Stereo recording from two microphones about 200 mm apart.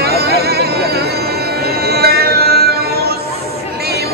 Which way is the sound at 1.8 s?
50° right (ahead or behind).